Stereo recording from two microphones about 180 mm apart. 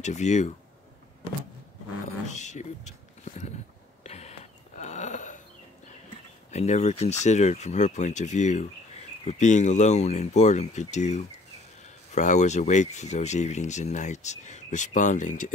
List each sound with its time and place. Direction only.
0.0 s speech: 40° left (ahead or behind)
2.2 s speech: 40° left (ahead or behind)
4.0 s a sound: 35° left (ahead or behind)
6.5 s speech: 40° left (ahead or behind)